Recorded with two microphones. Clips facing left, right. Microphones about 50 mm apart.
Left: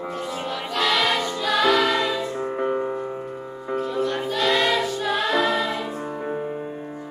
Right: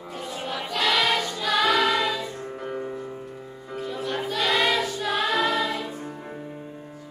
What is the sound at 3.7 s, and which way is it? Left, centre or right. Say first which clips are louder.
Music: left 5 dB; centre.